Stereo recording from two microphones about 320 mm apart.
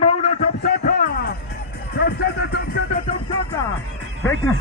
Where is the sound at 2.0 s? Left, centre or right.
Left.